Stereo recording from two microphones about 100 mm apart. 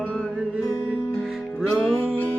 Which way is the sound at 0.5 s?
5° right (ahead or behind).